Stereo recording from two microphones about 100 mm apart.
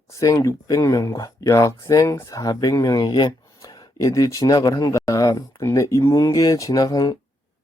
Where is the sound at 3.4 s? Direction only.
35° left (ahead or behind).